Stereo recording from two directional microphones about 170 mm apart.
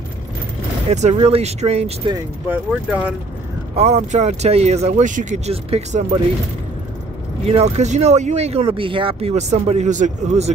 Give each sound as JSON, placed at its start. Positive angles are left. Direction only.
{"t": 0.9, "sound": "speech", "side_deg": -40}
{"t": 2.4, "sound": "speech", "side_deg": -10}
{"t": 3.7, "sound": "speech", "side_deg": -40}
{"t": 7.4, "sound": "speech", "side_deg": -40}